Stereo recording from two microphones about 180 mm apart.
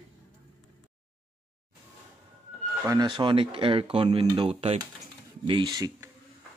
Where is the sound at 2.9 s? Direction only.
25° right (ahead or behind).